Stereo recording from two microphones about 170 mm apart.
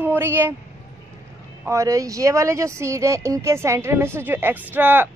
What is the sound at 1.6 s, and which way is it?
Speech, 20° right (ahead or behind).